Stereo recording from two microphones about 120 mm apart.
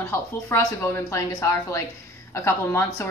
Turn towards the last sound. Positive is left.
turn(degrees=20)  # may be behind; listen again after turning